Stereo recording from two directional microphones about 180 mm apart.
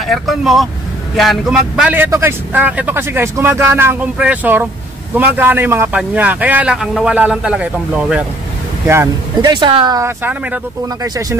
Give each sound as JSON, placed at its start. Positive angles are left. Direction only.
{"t": 0.0, "sound": "a man's voice", "side_deg": 0}